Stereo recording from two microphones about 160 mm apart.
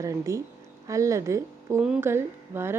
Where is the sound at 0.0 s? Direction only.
20° right (ahead or behind).